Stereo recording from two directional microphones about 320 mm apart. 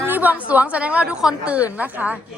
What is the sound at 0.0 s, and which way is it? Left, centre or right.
A woman's voice, centre.